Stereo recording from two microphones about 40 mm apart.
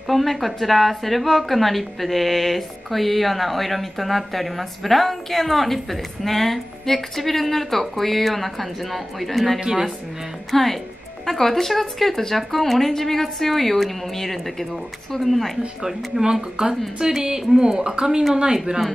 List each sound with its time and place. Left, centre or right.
0.1 s a woman's voice: centre
9.6 s speech: centre
10.5 s a woman's voice: centre
15.8 s speech: centre